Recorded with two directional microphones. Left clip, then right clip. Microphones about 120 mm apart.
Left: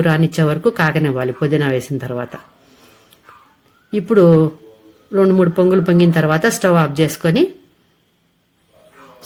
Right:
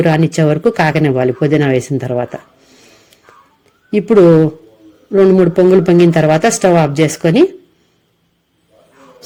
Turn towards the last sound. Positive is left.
turn(degrees=-40)  # may be behind; listen again after turning